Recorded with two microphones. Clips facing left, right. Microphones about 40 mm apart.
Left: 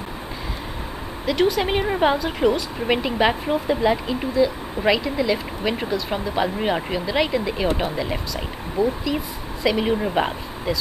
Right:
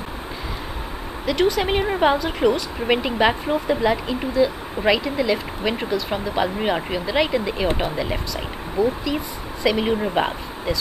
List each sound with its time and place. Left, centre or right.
1.2 s speech: centre